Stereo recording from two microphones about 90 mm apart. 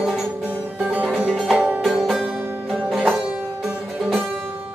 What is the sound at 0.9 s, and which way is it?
Music, 15° right (ahead or behind).